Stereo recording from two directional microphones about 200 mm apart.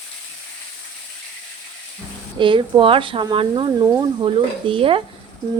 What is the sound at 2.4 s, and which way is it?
Speech, 25° right (ahead or behind).